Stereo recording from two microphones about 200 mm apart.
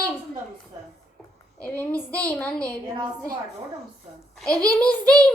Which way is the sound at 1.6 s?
5° left (ahead or behind).